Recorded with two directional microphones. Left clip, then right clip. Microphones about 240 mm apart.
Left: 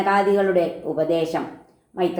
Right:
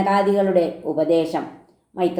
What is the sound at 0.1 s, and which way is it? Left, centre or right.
A woman's voice, right.